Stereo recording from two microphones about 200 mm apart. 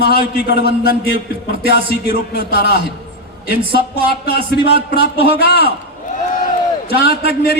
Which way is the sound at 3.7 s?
50° left (ahead or behind).